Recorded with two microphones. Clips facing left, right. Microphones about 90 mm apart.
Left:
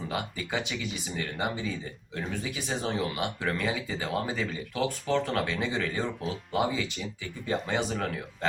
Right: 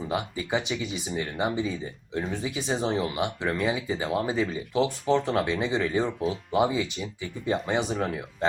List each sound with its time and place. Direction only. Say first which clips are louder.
0.1 s speech: right 5 dB; 20° right (ahead or behind)